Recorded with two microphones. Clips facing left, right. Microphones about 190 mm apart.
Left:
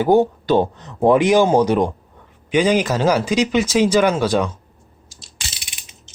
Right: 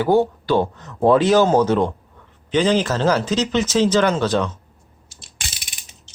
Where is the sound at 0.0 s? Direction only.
20° left (ahead or behind).